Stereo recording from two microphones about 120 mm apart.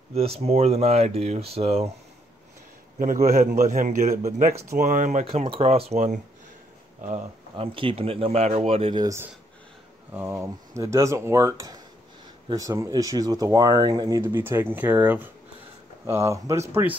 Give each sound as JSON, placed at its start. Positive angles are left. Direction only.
{"t": 0.1, "sound": "speech", "side_deg": -55}
{"t": 3.3, "sound": "a man's voice", "side_deg": -90}
{"t": 4.4, "sound": "speech", "side_deg": -60}
{"t": 4.7, "sound": "a man's voice", "side_deg": -90}
{"t": 5.5, "sound": "speech", "side_deg": -55}
{"t": 7.5, "sound": "speech", "side_deg": -50}
{"t": 8.9, "sound": "speech", "side_deg": -30}
{"t": 10.1, "sound": "speech", "side_deg": -20}
{"t": 14.2, "sound": "speech", "side_deg": -20}